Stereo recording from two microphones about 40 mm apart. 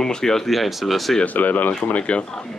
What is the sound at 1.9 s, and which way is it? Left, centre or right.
Speech, left.